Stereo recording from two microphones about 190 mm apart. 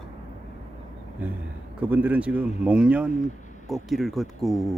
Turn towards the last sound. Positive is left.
turn(degrees=0)  # may be behind; listen again after turning